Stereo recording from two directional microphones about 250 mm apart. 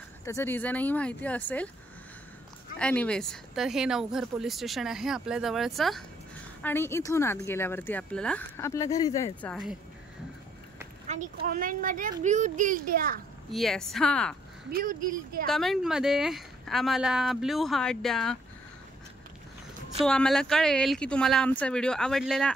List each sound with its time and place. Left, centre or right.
0.2 s speech: centre
2.8 s speech: centre
11.1 s speech: right
13.5 s speech: centre
14.7 s speech: right
15.4 s speech: centre
20.1 s speech: centre